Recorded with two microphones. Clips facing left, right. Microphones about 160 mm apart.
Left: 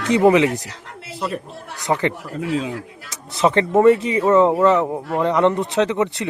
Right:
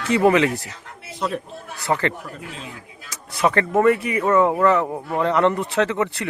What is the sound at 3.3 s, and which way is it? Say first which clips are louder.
Speech: left 3 dB; 25° left (ahead or behind).